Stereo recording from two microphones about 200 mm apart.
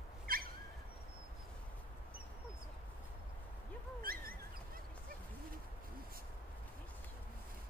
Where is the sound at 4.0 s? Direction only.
45° right (ahead or behind).